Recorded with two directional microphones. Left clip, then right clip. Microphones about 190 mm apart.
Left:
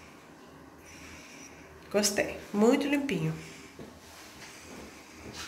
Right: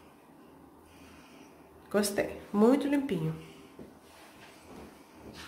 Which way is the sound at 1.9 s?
30° right (ahead or behind).